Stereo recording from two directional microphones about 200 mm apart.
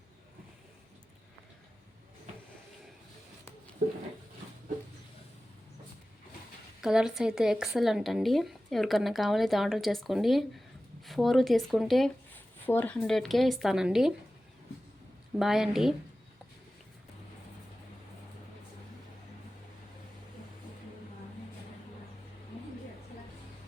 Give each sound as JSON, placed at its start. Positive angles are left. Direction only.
{"t": 3.8, "sound": "speech", "side_deg": -45}
{"t": 6.8, "sound": "speech", "side_deg": -5}
{"t": 15.4, "sound": "speech", "side_deg": 0}